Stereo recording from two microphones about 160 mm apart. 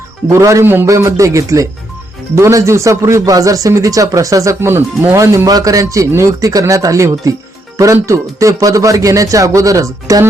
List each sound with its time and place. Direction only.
0.3 s speech: 20° right (ahead or behind)